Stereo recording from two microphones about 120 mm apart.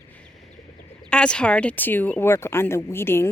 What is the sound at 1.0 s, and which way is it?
Speech, 10° left (ahead or behind).